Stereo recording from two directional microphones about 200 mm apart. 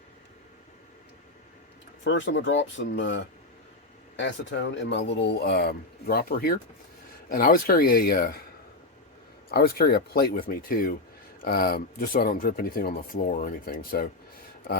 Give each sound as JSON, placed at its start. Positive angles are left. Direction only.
{"t": 2.0, "sound": "speech", "side_deg": 65}
{"t": 4.2, "sound": "speech", "side_deg": 65}
{"t": 9.5, "sound": "speech", "side_deg": 50}